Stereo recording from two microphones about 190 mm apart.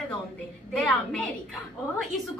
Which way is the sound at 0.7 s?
5° left (ahead or behind).